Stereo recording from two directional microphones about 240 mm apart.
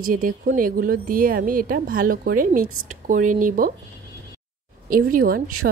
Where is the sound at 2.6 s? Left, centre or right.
Right.